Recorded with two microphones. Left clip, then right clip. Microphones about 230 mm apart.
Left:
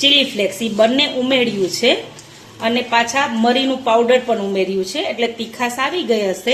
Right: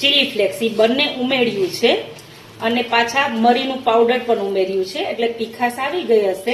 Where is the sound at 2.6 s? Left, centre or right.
Left.